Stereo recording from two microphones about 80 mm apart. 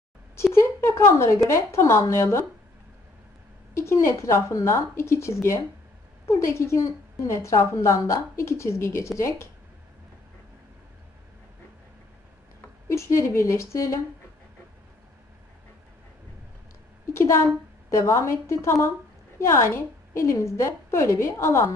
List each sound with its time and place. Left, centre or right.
0.5 s a woman's voice: left
3.7 s a woman's voice: left
12.9 s a woman's voice: left
17.0 s a woman's voice: left